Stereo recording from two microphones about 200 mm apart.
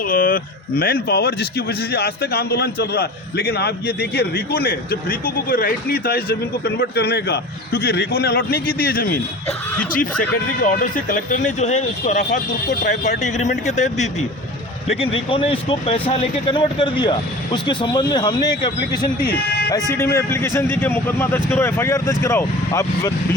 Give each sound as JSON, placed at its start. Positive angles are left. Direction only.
{"t": 0.1, "sound": "a man's voice", "side_deg": 45}